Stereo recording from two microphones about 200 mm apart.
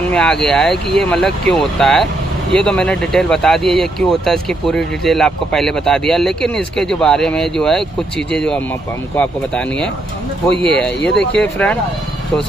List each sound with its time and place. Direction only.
0.1 s speech: 5° left (ahead or behind)
11.1 s speech: 5° left (ahead or behind)